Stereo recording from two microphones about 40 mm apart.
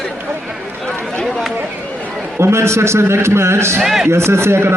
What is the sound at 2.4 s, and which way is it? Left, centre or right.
A man's voice, right.